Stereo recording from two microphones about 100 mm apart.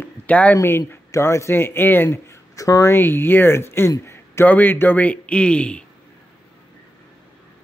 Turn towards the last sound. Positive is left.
turn(degrees=10)  # may be behind; listen again after turning